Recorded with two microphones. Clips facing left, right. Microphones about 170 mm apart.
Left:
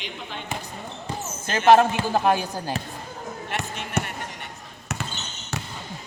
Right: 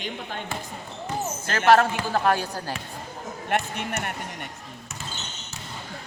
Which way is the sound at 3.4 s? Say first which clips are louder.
Right 7 dB; 55° right (ahead or behind).